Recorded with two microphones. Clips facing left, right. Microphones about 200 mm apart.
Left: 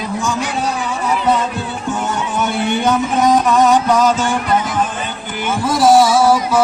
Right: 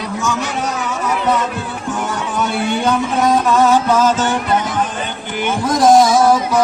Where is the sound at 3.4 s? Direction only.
15° left (ahead or behind).